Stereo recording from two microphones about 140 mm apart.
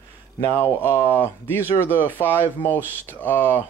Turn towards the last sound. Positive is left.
turn(degrees=15)  # may be behind; listen again after turning